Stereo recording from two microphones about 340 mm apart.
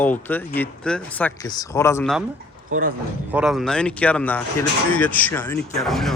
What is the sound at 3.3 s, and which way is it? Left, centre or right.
Speech, centre.